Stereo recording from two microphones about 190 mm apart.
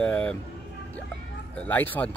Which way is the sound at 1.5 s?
10° left (ahead or behind).